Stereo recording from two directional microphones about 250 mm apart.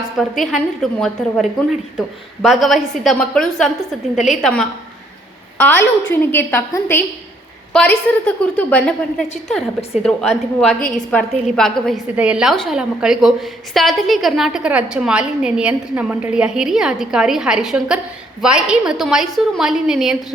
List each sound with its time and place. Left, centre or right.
0.2 s a woman's voice: centre